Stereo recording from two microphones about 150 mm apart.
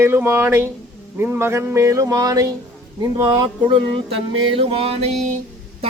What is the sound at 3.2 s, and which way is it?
Music, 30° right (ahead or behind).